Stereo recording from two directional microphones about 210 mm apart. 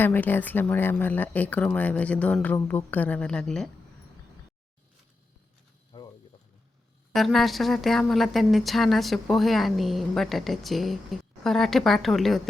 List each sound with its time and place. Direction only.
0.0 s speech: 10° left (ahead or behind)
5.9 s a sound: 25° left (ahead or behind)
7.1 s speech: centre (ahead or behind)